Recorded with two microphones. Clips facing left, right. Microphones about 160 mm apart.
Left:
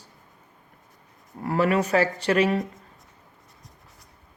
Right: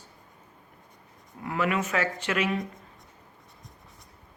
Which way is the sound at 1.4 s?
35° left (ahead or behind).